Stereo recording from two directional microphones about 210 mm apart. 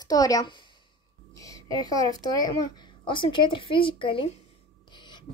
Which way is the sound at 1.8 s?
20° left (ahead or behind).